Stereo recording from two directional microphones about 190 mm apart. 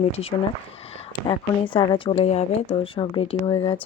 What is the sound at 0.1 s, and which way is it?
Speech, 30° left (ahead or behind).